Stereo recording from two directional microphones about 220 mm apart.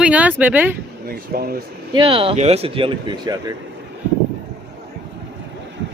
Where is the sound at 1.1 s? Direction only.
45° right (ahead or behind).